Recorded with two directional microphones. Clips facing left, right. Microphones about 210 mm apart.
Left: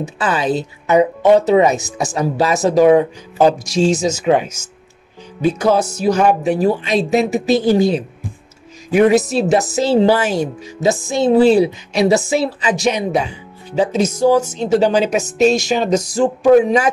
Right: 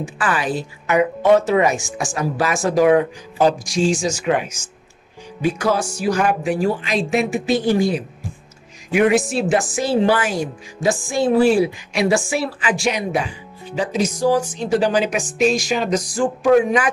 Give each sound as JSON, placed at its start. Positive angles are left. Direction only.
{"t": 0.0, "sound": "speech", "side_deg": 25}
{"t": 6.6, "sound": "speech", "side_deg": 40}
{"t": 7.6, "sound": "speech", "side_deg": 25}